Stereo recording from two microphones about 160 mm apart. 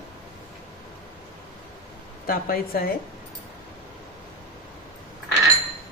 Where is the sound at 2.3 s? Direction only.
65° left (ahead or behind).